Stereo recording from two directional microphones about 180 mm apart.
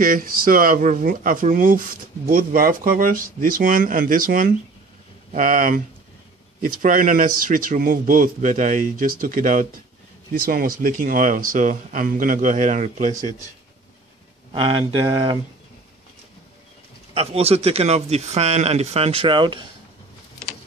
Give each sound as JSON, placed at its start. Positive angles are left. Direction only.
{"t": 0.0, "sound": "speech", "side_deg": -50}
{"t": 14.5, "sound": "speech", "side_deg": -30}
{"t": 17.1, "sound": "speech", "side_deg": -35}